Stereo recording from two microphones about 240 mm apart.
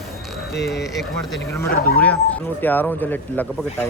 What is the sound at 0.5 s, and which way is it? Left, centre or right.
Speech, centre.